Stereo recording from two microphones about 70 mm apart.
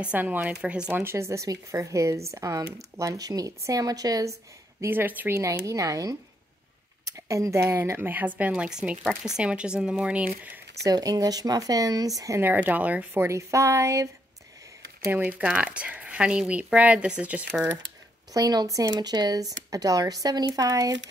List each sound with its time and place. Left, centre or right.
0.0 s speech: right
0.7 s speech: centre
0.9 s speech: right
3.0 s a woman's voice: right
4.8 s speech: right
5.3 s speech: right
8.6 s speech: centre
10.8 s a woman's voice: right
12.4 s speech: right
13.2 s speech: right
15.0 s speech: right
18.3 s a woman's voice: right
18.9 s speech: right
19.7 s a woman's voice: right